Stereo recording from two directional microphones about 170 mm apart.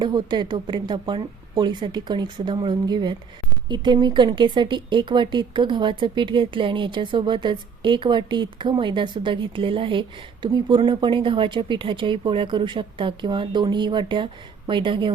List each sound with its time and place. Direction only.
0.0 s speech: 25° right (ahead or behind)